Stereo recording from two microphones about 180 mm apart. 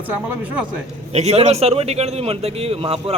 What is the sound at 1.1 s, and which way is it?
Speech, 35° right (ahead or behind).